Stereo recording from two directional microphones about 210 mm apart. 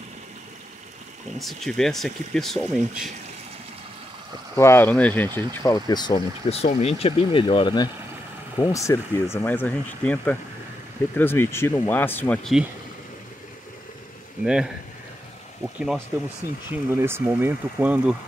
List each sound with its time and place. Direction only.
1.4 s speech: centre (ahead or behind)
4.6 s speech: 10° left (ahead or behind)
14.4 s speech: centre (ahead or behind)
16.9 s speech: 10° right (ahead or behind)